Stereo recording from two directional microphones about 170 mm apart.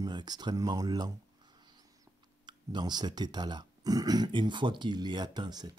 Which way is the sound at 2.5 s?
25° right (ahead or behind).